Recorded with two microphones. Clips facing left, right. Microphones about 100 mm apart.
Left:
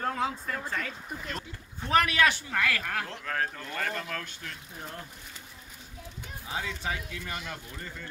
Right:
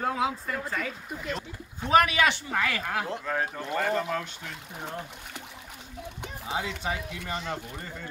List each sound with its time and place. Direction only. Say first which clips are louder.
0.0 s speech: right 2 dB; 5° right (ahead or behind)
1.9 s speech: right 3 dB; 15° right (ahead or behind)
4.7 s speech: right 8 dB; 65° right (ahead or behind)
6.8 s speech: right 2 dB; 25° right (ahead or behind)